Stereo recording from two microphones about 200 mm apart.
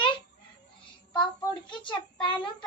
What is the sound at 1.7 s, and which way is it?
Child singing, 25° left (ahead or behind).